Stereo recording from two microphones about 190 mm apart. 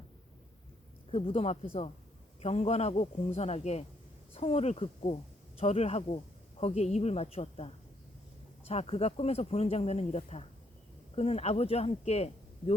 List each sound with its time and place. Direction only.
1.1 s speech: 30° left (ahead or behind)